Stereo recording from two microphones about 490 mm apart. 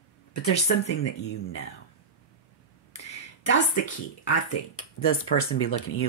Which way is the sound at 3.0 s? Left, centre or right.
Left.